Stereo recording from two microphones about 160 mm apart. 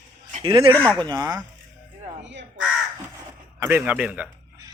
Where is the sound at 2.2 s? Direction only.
90° right.